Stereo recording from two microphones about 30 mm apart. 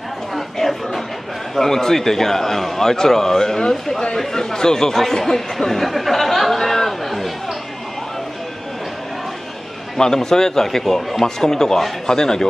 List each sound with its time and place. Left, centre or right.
0.3 s chatter: centre
1.5 s a man's voice: centre
6.6 s chatter: centre
9.9 s a man's voice: centre
11.2 s a man's voice: centre